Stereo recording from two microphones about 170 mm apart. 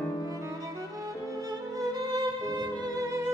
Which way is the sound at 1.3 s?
20° right (ahead or behind).